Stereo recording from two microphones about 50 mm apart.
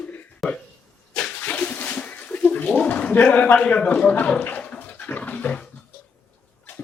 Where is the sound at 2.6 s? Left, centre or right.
Left.